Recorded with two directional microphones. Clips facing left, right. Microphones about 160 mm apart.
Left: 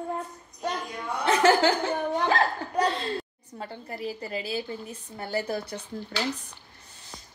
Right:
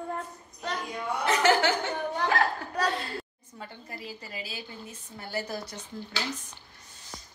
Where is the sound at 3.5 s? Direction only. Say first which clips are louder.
Left 5 dB; 35° left (ahead or behind).